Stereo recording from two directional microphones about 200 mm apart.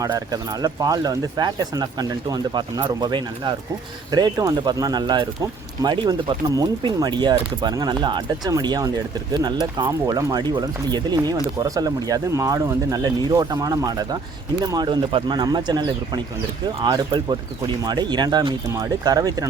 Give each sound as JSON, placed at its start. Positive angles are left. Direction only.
{"t": 0.0, "sound": "speech", "side_deg": -20}